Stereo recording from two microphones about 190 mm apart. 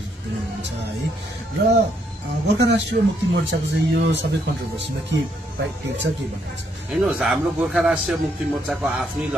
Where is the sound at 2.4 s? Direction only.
65° right (ahead or behind).